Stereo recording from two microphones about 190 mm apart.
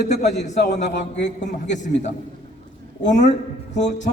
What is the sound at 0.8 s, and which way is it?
Speech, 65° left (ahead or behind).